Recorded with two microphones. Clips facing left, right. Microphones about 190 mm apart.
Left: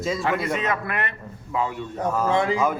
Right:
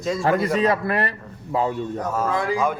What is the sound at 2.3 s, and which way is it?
Speech, 25° left (ahead or behind).